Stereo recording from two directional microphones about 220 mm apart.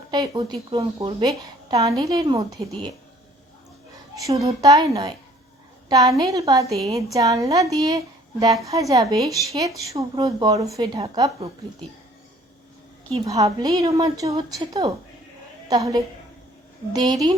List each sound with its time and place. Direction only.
0.1 s a woman's voice: 20° right (ahead or behind)
4.1 s a woman's voice: 15° right (ahead or behind)
13.2 s a woman's voice: 15° right (ahead or behind)